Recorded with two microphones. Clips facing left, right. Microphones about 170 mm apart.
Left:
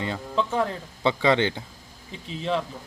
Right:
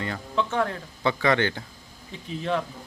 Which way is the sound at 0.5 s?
15° left (ahead or behind).